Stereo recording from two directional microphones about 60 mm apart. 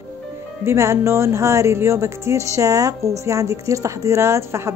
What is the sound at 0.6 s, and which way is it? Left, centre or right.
Speech, right.